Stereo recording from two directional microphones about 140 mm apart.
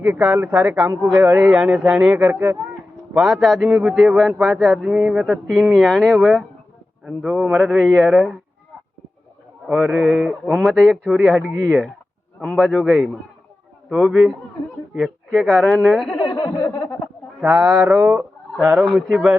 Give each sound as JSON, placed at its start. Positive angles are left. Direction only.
{"t": 0.0, "sound": "speech", "side_deg": -10}
{"t": 3.2, "sound": "a man's voice", "side_deg": -5}
{"t": 9.6, "sound": "a man's voice", "side_deg": 0}
{"t": 13.9, "sound": "a man's voice", "side_deg": 0}
{"t": 16.2, "sound": "a sound", "side_deg": 25}
{"t": 17.4, "sound": "a man's voice", "side_deg": -5}